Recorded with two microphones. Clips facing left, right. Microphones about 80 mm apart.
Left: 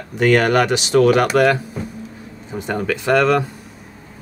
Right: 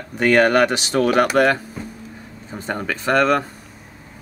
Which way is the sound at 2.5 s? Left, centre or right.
Right.